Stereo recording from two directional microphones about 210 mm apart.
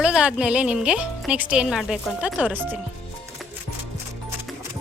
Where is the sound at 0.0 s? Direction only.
5° right (ahead or behind).